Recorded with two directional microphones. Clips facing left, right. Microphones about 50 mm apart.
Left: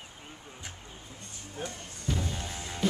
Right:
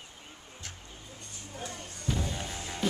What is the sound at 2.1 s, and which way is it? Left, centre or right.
Music, centre.